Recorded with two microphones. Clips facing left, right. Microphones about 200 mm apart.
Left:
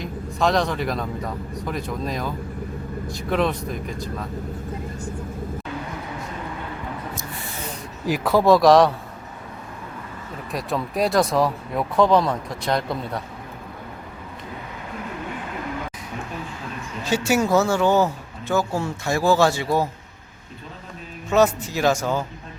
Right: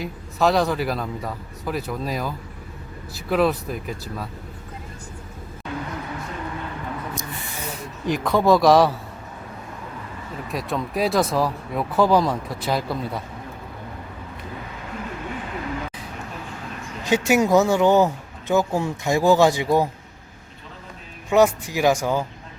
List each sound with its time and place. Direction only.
0.0 s speech: 5° right (ahead or behind)
8.0 s speech: 5° left (ahead or behind)
10.5 s speech: centre (ahead or behind)
17.0 s speech: 15° right (ahead or behind)
21.2 s speech: 15° right (ahead or behind)